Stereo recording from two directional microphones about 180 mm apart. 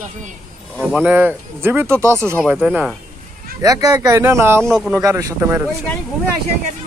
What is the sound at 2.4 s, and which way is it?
Speech, 5° right (ahead or behind).